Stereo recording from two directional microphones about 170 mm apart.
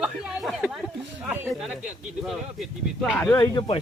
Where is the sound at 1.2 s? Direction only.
5° right (ahead or behind).